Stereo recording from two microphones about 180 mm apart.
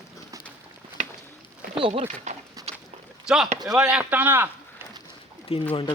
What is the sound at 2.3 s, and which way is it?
Speech, 40° right (ahead or behind).